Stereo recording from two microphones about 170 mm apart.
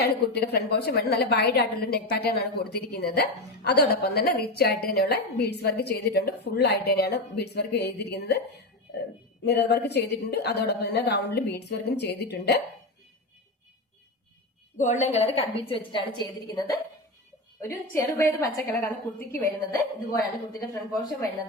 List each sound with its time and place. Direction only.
0.0 s a woman's voice: 70° left (ahead or behind)
9.4 s a woman's voice: 75° left (ahead or behind)
14.8 s a woman's voice: 45° left (ahead or behind); by 20.7 s 20° left (ahead or behind)